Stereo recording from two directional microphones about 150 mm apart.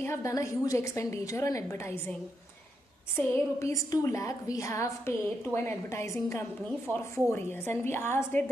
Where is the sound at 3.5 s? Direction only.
20° left (ahead or behind).